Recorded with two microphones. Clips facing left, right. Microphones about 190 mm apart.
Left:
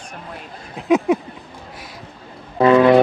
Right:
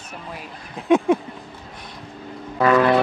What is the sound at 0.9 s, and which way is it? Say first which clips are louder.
Speech: left 1 dB; centre (ahead or behind).